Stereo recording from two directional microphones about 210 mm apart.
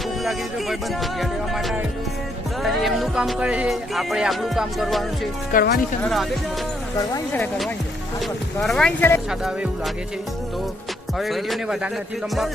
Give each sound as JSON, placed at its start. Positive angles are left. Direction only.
{"t": 1.2, "sound": "music", "side_deg": 0}
{"t": 5.5, "sound": "speech", "side_deg": 45}
{"t": 6.0, "sound": "music", "side_deg": 0}
{"t": 8.6, "sound": "speech", "side_deg": 5}
{"t": 11.2, "sound": "music", "side_deg": 0}